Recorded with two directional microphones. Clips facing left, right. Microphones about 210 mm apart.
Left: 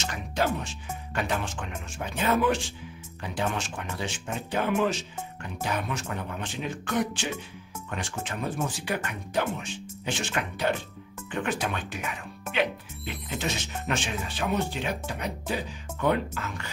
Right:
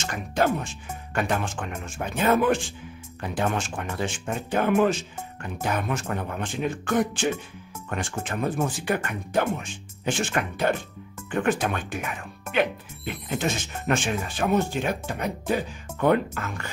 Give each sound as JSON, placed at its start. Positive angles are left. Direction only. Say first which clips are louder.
{"t": 0.0, "sound": "speech", "louder": "right 4 dB", "side_deg": -50}